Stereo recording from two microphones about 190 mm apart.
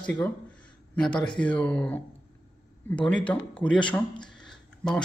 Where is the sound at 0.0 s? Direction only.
5° left (ahead or behind).